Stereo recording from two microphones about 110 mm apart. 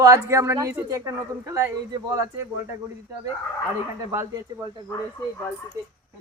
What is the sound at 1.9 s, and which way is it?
Speech, 35° right (ahead or behind).